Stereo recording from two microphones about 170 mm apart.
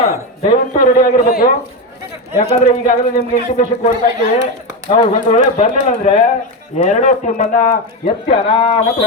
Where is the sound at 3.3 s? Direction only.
40° left (ahead or behind).